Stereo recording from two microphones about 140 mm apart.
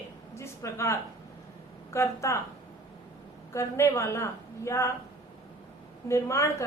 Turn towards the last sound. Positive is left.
turn(degrees=20)  # may be behind; listen again after turning